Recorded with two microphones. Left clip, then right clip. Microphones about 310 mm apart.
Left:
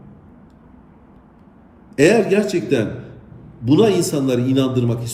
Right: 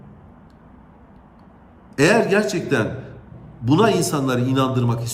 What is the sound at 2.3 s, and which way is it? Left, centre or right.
A man's voice, centre.